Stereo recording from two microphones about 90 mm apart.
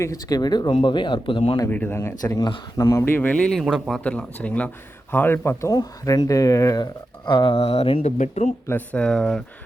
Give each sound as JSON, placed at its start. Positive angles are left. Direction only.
{"t": 0.0, "sound": "speech", "side_deg": 40}
{"t": 0.7, "sound": "speech", "side_deg": 65}
{"t": 1.7, "sound": "speech", "side_deg": 20}
{"t": 2.2, "sound": "speech", "side_deg": 45}
{"t": 2.7, "sound": "speech", "side_deg": 35}
{"t": 3.0, "sound": "speech", "side_deg": 20}
{"t": 3.6, "sound": "speech", "side_deg": 0}
{"t": 4.0, "sound": "speech", "side_deg": 15}
{"t": 7.3, "sound": "speech", "side_deg": 65}
{"t": 8.6, "sound": "speech", "side_deg": 25}
{"t": 9.0, "sound": "speech", "side_deg": 10}